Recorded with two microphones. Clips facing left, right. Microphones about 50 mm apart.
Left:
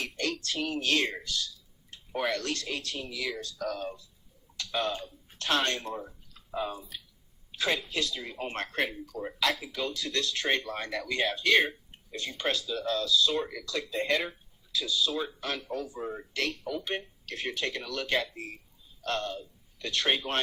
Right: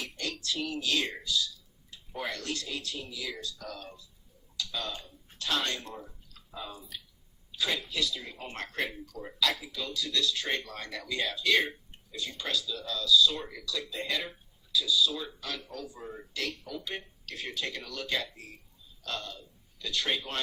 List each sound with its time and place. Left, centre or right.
0.0 s speech: left
3.3 s speech: left
4.5 s tick-tock: left
5.4 s speech: left
7.5 s a sound: left
7.9 s speech: left